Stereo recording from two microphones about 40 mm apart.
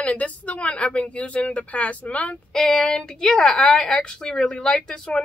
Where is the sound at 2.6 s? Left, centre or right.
Centre.